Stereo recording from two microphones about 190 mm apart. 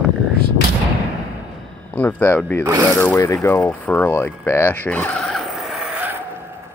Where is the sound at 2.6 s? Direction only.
20° right (ahead or behind).